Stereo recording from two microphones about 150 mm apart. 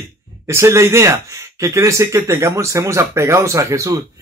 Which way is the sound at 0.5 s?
20° right (ahead or behind).